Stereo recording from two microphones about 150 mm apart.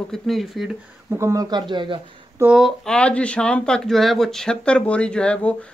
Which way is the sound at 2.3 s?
5° right (ahead or behind).